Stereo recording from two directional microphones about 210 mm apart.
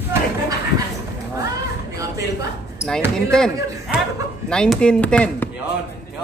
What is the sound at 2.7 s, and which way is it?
Basketball bounce, 5° left (ahead or behind).